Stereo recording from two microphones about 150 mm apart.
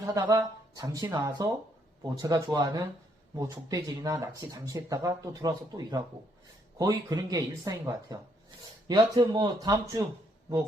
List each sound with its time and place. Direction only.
0.0 s speech: 25° right (ahead or behind)